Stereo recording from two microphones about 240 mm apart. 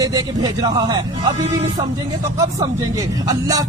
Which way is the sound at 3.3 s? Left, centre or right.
Centre.